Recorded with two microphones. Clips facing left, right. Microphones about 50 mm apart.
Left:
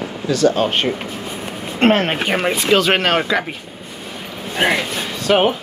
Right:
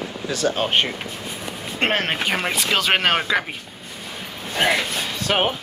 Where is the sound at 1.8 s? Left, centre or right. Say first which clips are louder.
Left 7 dB; centre.